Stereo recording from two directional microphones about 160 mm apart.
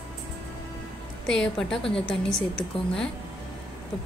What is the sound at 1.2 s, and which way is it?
A woman's voice, 5° left (ahead or behind).